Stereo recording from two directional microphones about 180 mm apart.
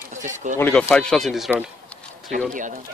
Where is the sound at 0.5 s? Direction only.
10° left (ahead or behind).